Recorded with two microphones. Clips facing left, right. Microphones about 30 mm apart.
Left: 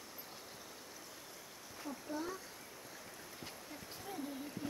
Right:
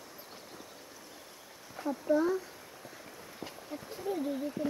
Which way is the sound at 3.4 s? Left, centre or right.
Right.